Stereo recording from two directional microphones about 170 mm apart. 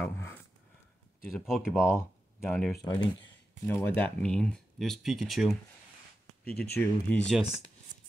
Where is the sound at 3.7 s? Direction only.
10° left (ahead or behind).